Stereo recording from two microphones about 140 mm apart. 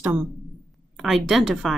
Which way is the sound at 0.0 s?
10° right (ahead or behind).